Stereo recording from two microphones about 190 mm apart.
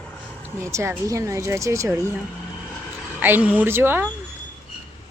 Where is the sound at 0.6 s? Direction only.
15° right (ahead or behind).